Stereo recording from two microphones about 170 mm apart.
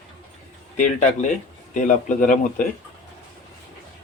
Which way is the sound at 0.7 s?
45° left (ahead or behind).